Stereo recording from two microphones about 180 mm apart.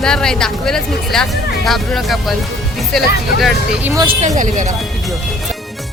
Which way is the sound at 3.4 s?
5° right (ahead or behind).